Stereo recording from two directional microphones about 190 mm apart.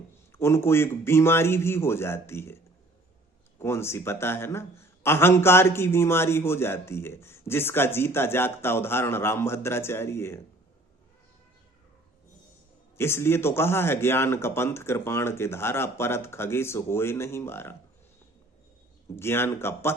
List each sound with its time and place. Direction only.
0.3 s a man's voice: 15° left (ahead or behind)
3.6 s a man's voice: 15° left (ahead or behind)
13.0 s a man's voice: 15° left (ahead or behind)
19.1 s a man's voice: 10° left (ahead or behind)